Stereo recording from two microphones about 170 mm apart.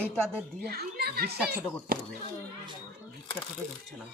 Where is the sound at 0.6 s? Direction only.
70° right (ahead or behind).